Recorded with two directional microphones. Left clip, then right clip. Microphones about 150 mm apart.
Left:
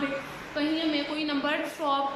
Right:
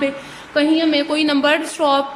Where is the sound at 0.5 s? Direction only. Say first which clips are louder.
Right 12 dB; 90° right.